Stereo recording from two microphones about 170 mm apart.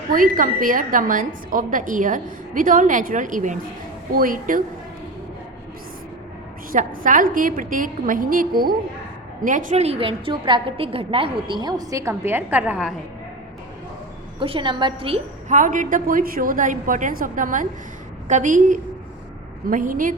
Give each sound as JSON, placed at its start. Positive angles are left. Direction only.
{"t": 0.1, "sound": "a woman's voice", "side_deg": -55}
{"t": 6.7, "sound": "a woman's voice", "side_deg": -50}
{"t": 14.3, "sound": "a woman's voice", "side_deg": -30}
{"t": 15.4, "sound": "a woman's voice", "side_deg": -50}